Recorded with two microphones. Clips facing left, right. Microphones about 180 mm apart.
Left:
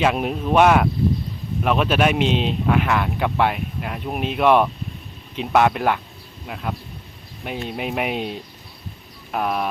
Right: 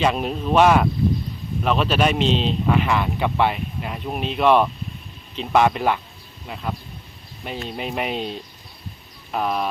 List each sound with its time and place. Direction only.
0.0 s speech: 10° left (ahead or behind)